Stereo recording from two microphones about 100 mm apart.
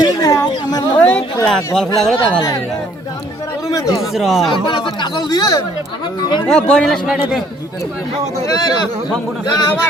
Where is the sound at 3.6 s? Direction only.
35° left (ahead or behind).